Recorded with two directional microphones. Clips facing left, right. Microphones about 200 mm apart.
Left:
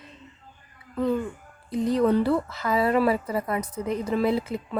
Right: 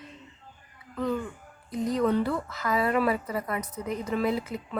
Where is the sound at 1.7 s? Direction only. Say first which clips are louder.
Left 4 dB; 30° left (ahead or behind).